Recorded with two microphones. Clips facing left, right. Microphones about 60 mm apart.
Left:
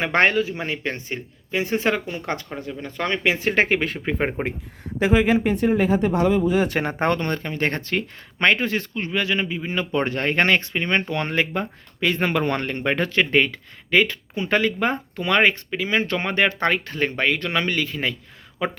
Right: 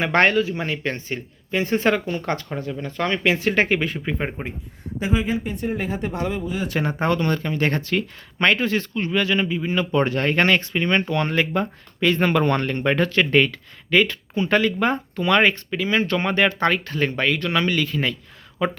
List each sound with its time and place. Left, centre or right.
0.0 s speech: centre; by 4.4 s left
4.9 s speech: left
6.5 s speech: left
7.3 s speech: left